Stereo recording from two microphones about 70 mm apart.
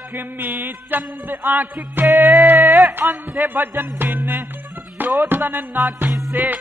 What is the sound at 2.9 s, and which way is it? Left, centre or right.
Speech, right.